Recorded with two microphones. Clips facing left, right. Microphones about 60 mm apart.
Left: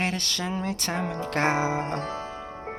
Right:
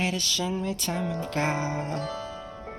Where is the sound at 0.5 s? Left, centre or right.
Left.